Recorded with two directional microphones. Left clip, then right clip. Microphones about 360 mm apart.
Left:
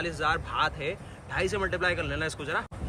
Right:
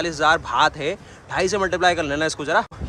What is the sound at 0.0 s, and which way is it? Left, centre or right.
A man's voice, centre.